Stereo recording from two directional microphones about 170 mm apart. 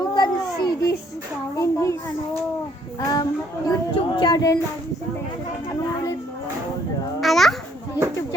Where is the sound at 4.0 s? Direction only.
25° left (ahead or behind).